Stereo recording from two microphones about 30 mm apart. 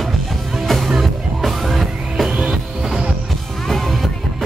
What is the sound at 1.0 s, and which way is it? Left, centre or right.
Music, centre.